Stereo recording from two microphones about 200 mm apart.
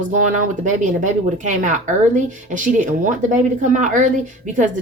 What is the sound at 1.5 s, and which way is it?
A woman's voice, 40° right (ahead or behind).